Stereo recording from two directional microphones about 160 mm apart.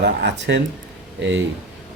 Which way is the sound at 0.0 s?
90° right.